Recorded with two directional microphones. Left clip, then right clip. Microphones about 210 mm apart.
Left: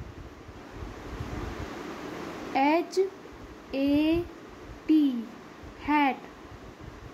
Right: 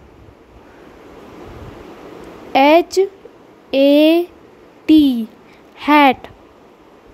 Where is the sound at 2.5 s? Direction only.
40° right (ahead or behind).